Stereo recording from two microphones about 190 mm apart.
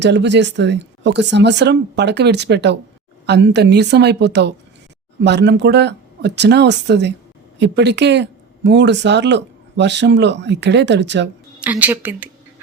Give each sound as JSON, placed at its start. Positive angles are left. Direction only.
{"t": 0.0, "sound": "speech", "side_deg": -65}
{"t": 11.6, "sound": "a woman's voice", "side_deg": -10}